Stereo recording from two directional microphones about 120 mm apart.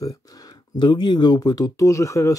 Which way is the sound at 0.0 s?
30° left (ahead or behind).